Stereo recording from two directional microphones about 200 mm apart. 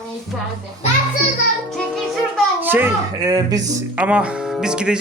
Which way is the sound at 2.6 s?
10° right (ahead or behind).